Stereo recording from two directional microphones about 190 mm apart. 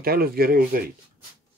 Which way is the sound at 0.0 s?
50° right (ahead or behind).